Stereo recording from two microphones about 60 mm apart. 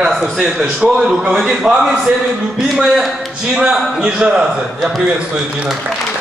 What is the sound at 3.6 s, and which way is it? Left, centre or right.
A man's voice, centre.